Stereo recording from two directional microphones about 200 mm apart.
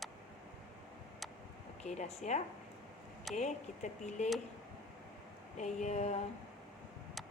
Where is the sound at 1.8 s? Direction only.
35° left (ahead or behind).